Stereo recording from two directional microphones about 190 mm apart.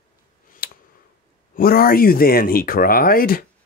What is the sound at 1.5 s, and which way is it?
Speech, 50° left (ahead or behind).